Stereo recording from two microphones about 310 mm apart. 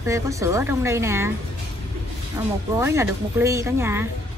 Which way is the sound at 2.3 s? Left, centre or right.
Centre.